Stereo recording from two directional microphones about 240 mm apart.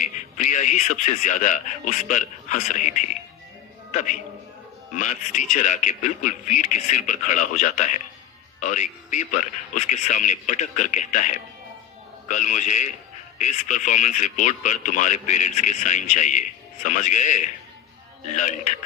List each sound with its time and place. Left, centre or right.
0.0 s speech: left